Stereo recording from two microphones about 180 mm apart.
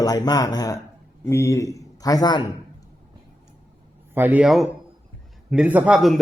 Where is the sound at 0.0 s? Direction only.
20° left (ahead or behind).